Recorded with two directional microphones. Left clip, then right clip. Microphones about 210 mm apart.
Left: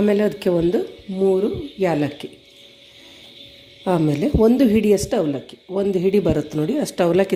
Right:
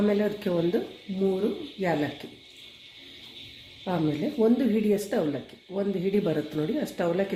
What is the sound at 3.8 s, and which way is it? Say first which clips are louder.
A woman's voice: left 9 dB; 40° left (ahead or behind).